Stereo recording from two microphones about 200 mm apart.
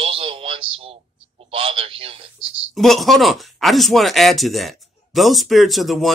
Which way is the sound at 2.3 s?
Centre (ahead or behind).